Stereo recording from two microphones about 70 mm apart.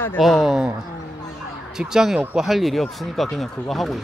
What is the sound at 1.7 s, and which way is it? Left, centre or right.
Speech, centre.